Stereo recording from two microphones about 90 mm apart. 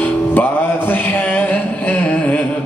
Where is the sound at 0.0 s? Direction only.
20° left (ahead or behind).